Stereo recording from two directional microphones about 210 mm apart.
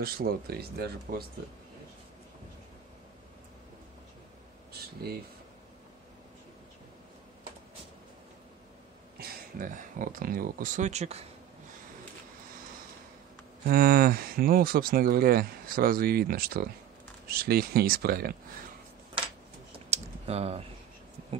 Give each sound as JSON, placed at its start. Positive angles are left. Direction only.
{"t": 0.0, "sound": "speech", "side_deg": -45}
{"t": 9.2, "sound": "speech", "side_deg": -40}
{"t": 13.7, "sound": "speech", "side_deg": -45}
{"t": 19.9, "sound": "typing", "side_deg": -30}